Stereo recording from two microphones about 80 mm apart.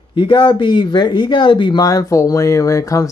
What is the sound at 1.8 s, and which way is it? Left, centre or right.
Speech, left.